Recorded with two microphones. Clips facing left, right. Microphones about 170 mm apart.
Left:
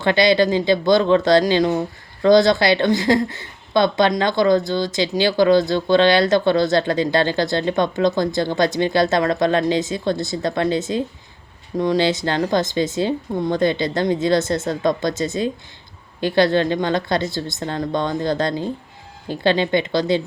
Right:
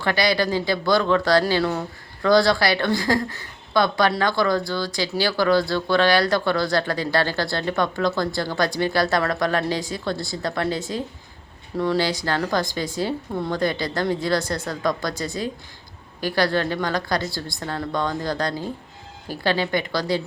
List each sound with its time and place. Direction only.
0.0 s speech: 25° left (ahead or behind)